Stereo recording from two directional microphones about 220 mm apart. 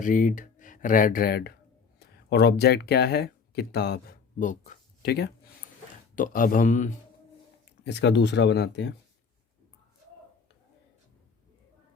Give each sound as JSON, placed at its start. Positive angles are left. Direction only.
{"t": 0.0, "sound": "speech", "side_deg": 35}
{"t": 6.1, "sound": "speech", "side_deg": 40}
{"t": 7.9, "sound": "speech", "side_deg": 50}